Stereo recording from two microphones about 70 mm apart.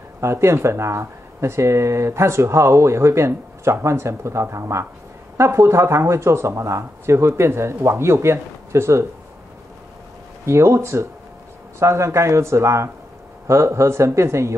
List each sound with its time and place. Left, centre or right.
0.2 s speech: right
10.4 s speech: right